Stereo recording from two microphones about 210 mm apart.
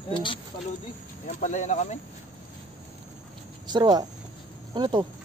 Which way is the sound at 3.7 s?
20° right (ahead or behind).